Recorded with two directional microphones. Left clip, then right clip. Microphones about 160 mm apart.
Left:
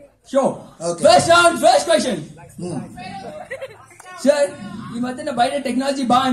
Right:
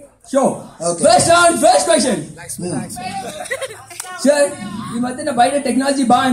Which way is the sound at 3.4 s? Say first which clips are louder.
Right 7 dB; 50° right (ahead or behind).